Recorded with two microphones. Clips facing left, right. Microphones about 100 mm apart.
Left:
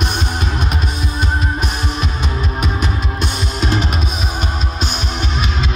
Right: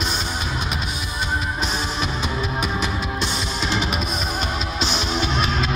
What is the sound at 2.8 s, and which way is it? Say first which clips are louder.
Music: left 3 dB; 50° left (ahead or behind).